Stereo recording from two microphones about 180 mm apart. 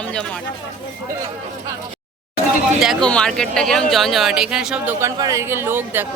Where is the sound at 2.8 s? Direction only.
Centre (ahead or behind).